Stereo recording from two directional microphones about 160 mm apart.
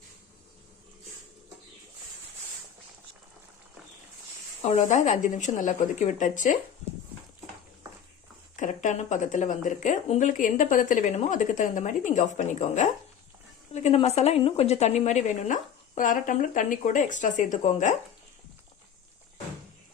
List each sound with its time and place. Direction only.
4.6 s speech: 45° left (ahead or behind)
8.5 s a woman's voice: 50° left (ahead or behind)